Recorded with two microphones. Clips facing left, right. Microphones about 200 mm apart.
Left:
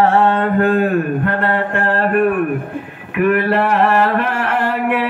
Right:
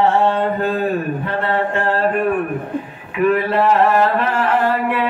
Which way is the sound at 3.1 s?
65° left (ahead or behind).